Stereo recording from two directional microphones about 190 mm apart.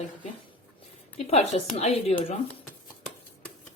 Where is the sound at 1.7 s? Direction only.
35° left (ahead or behind).